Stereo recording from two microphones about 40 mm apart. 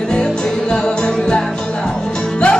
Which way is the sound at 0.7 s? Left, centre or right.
Left.